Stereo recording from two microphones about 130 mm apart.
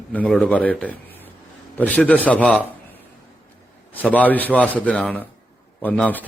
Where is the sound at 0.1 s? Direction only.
10° left (ahead or behind).